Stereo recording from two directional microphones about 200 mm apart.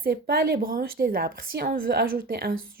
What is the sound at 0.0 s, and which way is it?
A woman's voice, 50° right (ahead or behind).